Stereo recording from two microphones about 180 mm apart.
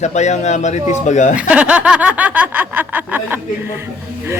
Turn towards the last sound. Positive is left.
turn(degrees=-10)  # may be behind; listen again after turning